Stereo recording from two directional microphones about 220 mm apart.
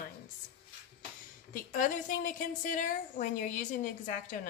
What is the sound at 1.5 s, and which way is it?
A woman's voice, 40° left (ahead or behind).